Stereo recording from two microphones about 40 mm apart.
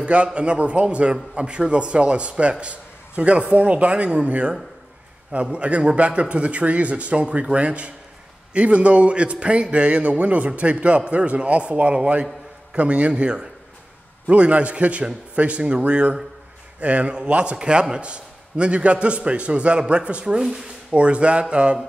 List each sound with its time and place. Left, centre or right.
0.0 s a man's voice: right
17.6 s a man's voice: right